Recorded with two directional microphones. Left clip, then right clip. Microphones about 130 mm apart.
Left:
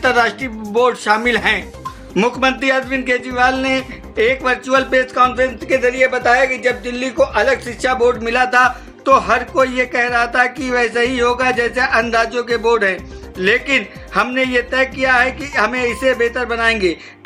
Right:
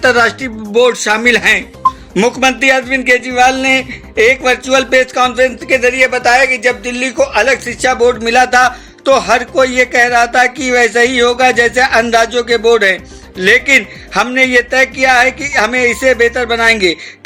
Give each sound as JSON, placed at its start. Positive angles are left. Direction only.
{"t": 0.0, "sound": "a man's voice", "side_deg": -20}